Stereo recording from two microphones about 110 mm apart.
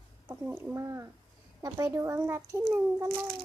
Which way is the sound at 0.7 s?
25° right (ahead or behind).